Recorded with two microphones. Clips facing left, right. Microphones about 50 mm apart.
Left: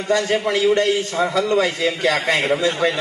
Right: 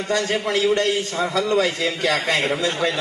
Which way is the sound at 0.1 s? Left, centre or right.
Left.